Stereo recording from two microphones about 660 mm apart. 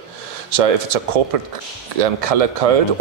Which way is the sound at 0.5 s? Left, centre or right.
Right.